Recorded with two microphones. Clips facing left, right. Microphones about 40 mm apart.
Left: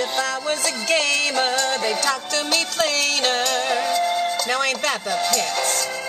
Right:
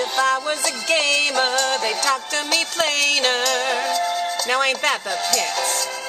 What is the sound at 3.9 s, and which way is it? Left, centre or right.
Music, centre.